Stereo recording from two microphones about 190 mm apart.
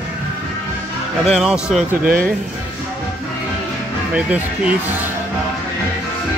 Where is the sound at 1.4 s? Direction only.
5° right (ahead or behind).